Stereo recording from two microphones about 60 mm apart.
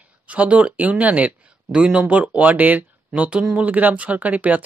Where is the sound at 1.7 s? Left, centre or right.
Centre.